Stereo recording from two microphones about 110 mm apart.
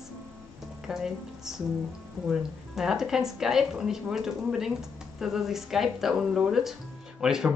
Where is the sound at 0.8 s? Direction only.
5° right (ahead or behind).